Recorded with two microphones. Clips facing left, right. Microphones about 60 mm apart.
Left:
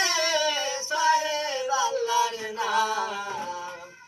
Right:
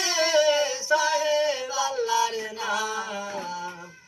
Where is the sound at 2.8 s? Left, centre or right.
Left.